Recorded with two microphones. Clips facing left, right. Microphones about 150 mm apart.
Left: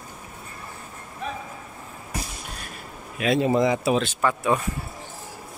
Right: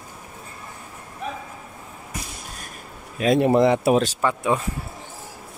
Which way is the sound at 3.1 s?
35° right (ahead or behind).